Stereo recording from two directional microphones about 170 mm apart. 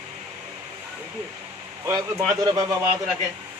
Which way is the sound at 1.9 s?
20° right (ahead or behind).